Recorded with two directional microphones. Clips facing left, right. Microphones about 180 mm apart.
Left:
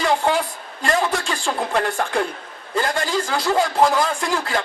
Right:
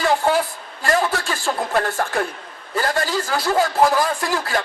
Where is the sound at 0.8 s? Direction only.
5° right (ahead or behind).